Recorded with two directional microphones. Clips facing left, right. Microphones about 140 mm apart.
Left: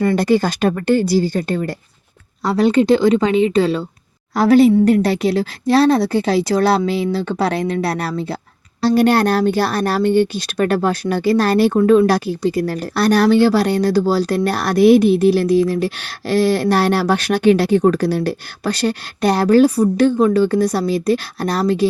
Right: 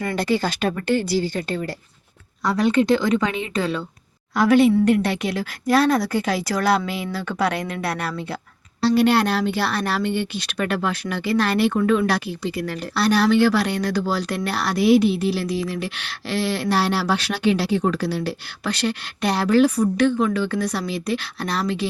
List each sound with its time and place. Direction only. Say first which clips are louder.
0.2 s speech: left 6 dB; 45° left (ahead or behind)
2.4 s speech: left 4 dB; 30° left (ahead or behind)
8.8 s speech: left 4 dB; 45° left (ahead or behind)